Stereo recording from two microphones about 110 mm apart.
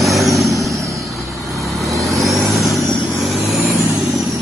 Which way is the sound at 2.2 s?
Centre (ahead or behind).